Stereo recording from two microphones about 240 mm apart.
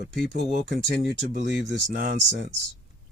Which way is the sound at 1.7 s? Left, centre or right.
Right.